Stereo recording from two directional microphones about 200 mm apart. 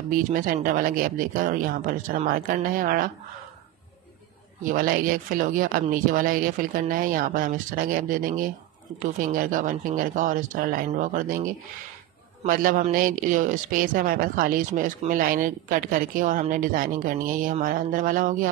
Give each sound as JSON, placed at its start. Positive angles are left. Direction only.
{"t": 0.1, "sound": "speech", "side_deg": -45}
{"t": 4.6, "sound": "speech", "side_deg": -45}